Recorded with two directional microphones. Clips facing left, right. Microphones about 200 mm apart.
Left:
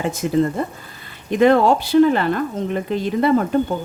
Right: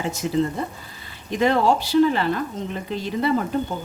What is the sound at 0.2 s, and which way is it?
Speech, 55° left (ahead or behind).